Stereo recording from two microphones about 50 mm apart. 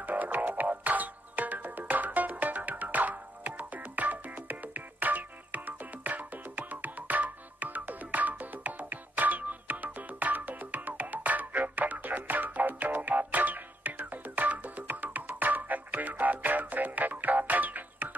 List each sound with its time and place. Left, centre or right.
0.0 s music: right